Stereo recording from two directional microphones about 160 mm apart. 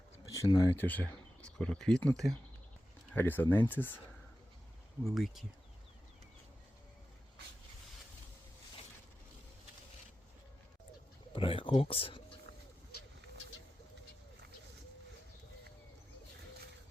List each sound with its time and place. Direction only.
0.3 s speech: 20° left (ahead or behind)
5.0 s speech: centre (ahead or behind)
11.3 s speech: 35° left (ahead or behind)